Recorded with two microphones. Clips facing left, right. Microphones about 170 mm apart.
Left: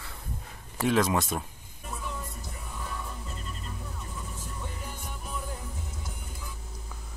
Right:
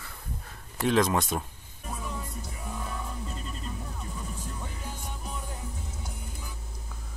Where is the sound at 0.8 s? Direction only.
5° left (ahead or behind).